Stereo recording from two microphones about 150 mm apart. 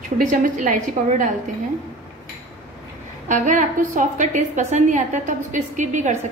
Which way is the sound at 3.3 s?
55° right (ahead or behind).